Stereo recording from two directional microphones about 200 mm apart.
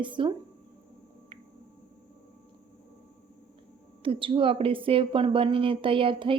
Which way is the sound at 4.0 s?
25° right (ahead or behind).